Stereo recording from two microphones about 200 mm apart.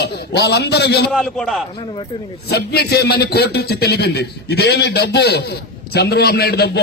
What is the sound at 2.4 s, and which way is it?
A man's voice, 50° left (ahead or behind).